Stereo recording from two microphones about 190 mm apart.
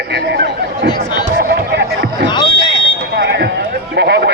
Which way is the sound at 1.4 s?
60° right (ahead or behind).